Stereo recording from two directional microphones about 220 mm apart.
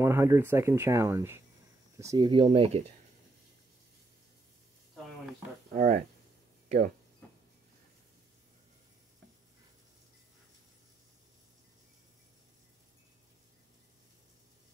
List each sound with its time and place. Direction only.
0.0 s speech: 10° right (ahead or behind); by 2.8 s 25° right (ahead or behind)
5.8 s speech: 35° right (ahead or behind)